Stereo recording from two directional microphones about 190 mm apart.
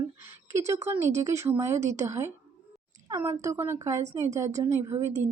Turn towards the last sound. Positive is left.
turn(degrees=-15)  # may be behind; listen again after turning